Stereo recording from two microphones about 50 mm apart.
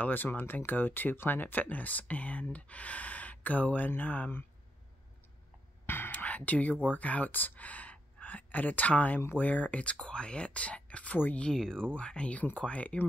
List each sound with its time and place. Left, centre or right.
0.0 s speech: left
5.9 s whispering: left
6.1 s speech: left
11.5 s speech: centre; by 13.0 s left